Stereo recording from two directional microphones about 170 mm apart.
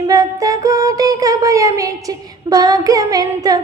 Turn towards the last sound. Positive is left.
turn(degrees=-20)  # may be behind; listen again after turning